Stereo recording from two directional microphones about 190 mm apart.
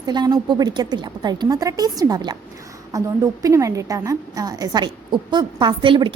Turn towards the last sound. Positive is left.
turn(degrees=-25)  # may be behind; listen again after turning